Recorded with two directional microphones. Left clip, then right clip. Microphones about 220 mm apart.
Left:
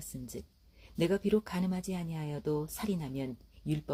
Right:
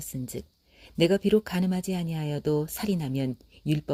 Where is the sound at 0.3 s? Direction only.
40° right (ahead or behind).